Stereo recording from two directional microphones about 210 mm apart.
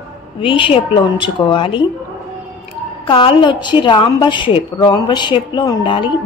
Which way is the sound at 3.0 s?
25° left (ahead or behind).